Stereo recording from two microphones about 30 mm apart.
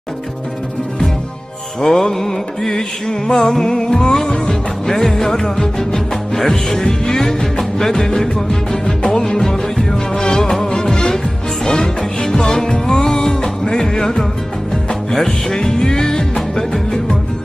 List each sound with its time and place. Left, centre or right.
1.8 s music: centre
4.8 s music: centre
15.2 s music: left
16.3 s music: centre